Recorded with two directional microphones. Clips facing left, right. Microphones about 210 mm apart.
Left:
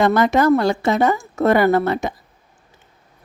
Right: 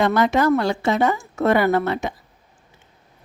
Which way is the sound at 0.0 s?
45° left (ahead or behind).